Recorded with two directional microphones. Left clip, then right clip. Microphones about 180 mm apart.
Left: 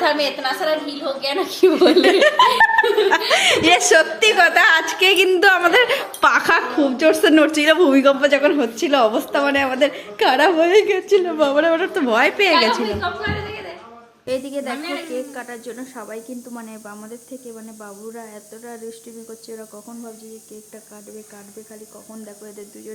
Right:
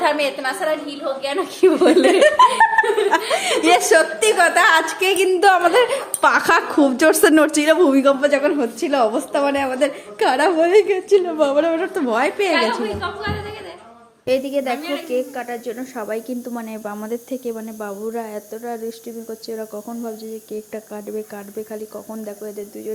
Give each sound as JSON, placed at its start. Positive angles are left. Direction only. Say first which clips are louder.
{"t": 0.0, "sound": "a woman's voice", "louder": "even", "side_deg": -10}
{"t": 6.4, "sound": "speech", "louder": "right 1 dB", "side_deg": -15}
{"t": 6.7, "sound": "a woman's voice", "louder": "right 1 dB", "side_deg": -40}
{"t": 7.6, "sound": "a woman's voice", "louder": "left 1 dB", "side_deg": -5}
{"t": 14.3, "sound": "speech", "louder": "right 5 dB", "side_deg": -10}
{"t": 16.0, "sound": "speech", "louder": "right 7 dB", "side_deg": -20}
{"t": 17.1, "sound": "speech", "louder": "right 10 dB", "side_deg": -30}